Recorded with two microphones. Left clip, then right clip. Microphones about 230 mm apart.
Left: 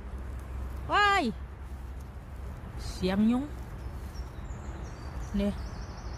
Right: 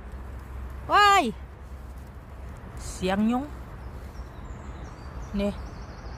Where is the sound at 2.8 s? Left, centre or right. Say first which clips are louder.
Right 3 dB; centre.